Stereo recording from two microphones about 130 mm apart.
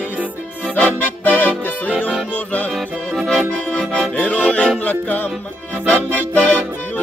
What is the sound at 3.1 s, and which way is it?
Music, centre (ahead or behind).